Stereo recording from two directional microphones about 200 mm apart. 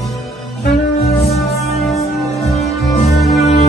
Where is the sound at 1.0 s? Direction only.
30° left (ahead or behind).